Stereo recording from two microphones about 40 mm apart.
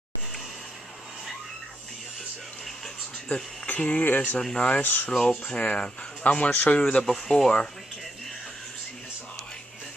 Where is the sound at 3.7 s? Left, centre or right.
Left.